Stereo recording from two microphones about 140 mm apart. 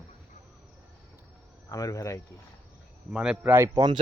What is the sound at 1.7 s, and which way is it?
Speech, 25° left (ahead or behind).